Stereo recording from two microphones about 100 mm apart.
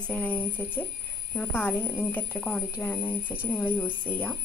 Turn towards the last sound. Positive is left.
turn(degrees=20)  # may be behind; listen again after turning